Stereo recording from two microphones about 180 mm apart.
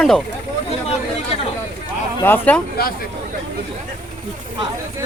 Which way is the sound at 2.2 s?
10° left (ahead or behind).